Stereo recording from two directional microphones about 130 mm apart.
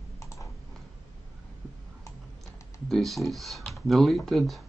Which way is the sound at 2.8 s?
Centre (ahead or behind).